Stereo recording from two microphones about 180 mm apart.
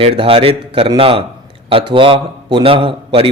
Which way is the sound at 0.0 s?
30° right (ahead or behind).